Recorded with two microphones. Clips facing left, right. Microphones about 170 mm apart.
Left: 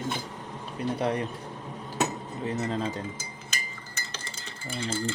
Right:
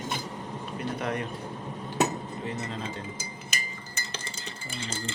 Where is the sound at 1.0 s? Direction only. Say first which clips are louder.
Left 4 dB; 30° left (ahead or behind).